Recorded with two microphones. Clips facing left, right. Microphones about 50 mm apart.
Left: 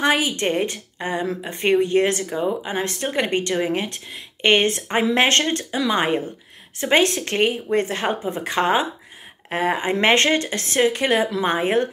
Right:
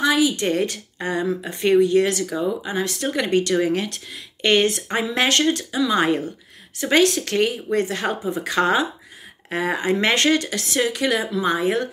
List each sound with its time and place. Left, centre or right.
0.0 s a woman's voice: left
0.5 s speech: left
5.9 s speech: left